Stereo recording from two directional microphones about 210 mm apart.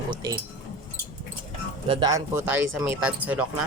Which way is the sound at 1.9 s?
20° right (ahead or behind).